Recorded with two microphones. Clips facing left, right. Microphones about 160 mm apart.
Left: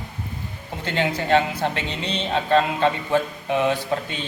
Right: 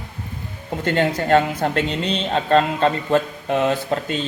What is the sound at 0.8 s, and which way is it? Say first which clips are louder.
A woman's voice: right 4 dB; 50° right (ahead or behind).